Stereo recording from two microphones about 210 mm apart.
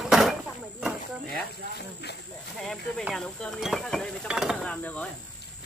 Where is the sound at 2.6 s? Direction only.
Centre (ahead or behind).